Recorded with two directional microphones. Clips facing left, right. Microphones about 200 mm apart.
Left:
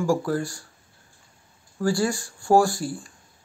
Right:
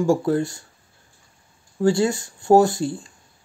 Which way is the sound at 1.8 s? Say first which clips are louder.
Right 5 dB; 25° right (ahead or behind).